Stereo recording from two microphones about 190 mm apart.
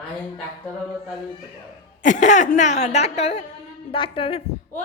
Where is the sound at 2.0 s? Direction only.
40° left (ahead or behind).